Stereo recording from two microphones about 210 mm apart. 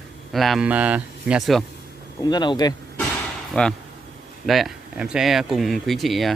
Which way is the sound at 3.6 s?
5° left (ahead or behind).